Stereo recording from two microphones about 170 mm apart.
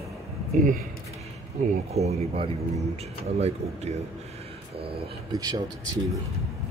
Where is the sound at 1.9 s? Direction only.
40° right (ahead or behind).